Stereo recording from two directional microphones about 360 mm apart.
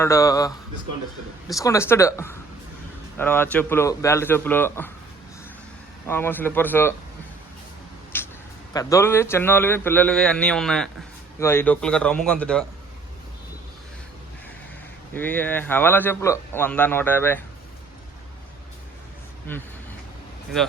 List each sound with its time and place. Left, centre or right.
0.0 s a man's voice: centre
6.1 s a man's voice: centre
8.1 s vehicle: centre
8.7 s a man's voice: centre
15.1 s a man's voice: centre
19.5 s a man's voice: centre